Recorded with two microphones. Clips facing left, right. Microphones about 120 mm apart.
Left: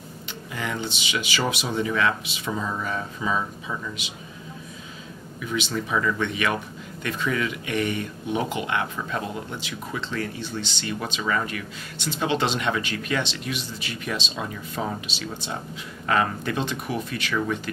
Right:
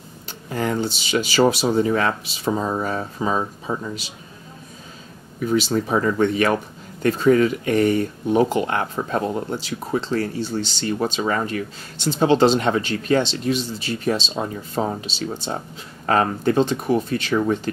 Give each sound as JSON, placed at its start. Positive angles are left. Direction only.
{"t": 0.5, "sound": "speech", "side_deg": -40}
{"t": 5.4, "sound": "speech", "side_deg": -40}